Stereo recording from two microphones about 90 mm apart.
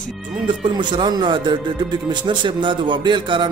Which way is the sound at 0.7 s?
55° right (ahead or behind).